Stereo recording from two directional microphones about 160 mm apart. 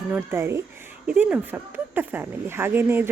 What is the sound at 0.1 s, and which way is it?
A woman's voice, 15° right (ahead or behind).